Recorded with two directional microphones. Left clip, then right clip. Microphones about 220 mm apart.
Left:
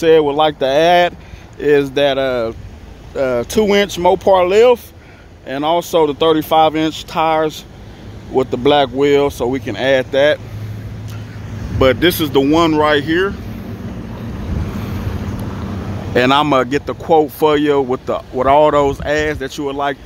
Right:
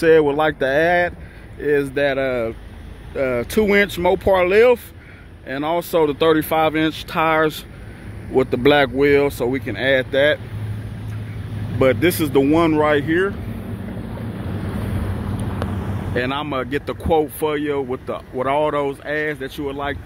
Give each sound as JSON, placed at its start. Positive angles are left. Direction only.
{"t": 0.0, "sound": "speech", "side_deg": 5}
{"t": 11.8, "sound": "speech", "side_deg": 5}
{"t": 16.2, "sound": "speech", "side_deg": 30}